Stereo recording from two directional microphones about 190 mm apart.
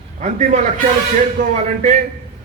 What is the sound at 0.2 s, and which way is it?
A man's voice, 40° right (ahead or behind).